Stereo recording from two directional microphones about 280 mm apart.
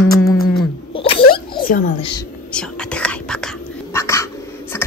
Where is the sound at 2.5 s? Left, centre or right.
Centre.